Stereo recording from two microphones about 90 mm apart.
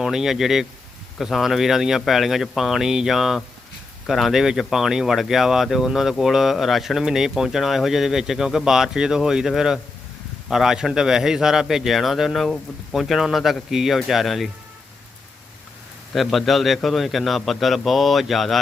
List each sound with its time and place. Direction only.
0.0 s speech: 5° right (ahead or behind)
16.1 s speech: centre (ahead or behind)